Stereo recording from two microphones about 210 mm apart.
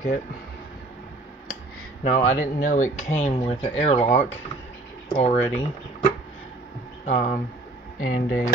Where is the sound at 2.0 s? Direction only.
35° left (ahead or behind).